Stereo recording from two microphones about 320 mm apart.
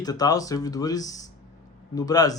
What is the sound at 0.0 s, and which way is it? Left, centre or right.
Speech, centre.